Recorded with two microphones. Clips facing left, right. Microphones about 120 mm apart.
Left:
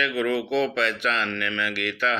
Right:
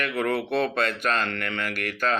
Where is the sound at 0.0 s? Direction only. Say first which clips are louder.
Left 1 dB; 45° right (ahead or behind).